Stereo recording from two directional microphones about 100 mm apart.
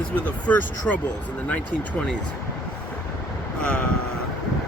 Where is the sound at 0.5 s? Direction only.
15° left (ahead or behind).